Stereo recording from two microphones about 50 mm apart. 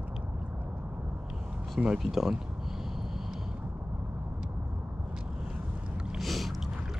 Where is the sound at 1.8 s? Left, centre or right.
Centre.